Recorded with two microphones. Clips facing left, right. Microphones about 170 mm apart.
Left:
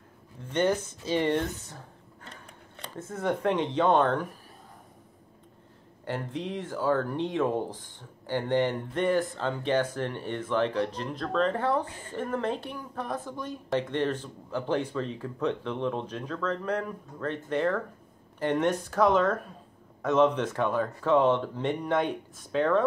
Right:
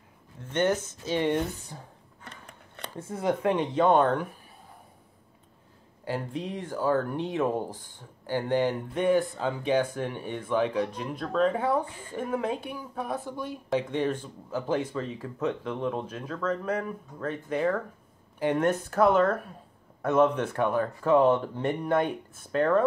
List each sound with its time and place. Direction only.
0.4 s speech: 10° left (ahead or behind)
1.1 s speech: 10° right (ahead or behind)
3.2 s speech: 10° right (ahead or behind)
6.0 s speech: 10° right (ahead or behind)